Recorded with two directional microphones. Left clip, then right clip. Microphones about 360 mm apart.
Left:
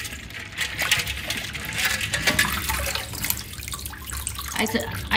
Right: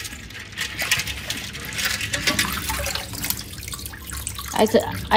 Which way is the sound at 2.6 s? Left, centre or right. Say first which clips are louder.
Even; centre.